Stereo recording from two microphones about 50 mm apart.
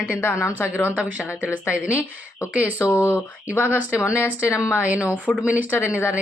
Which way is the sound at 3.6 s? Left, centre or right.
Right.